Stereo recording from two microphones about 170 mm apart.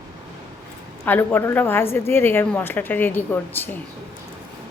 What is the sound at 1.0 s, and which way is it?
A woman's voice, 10° left (ahead or behind).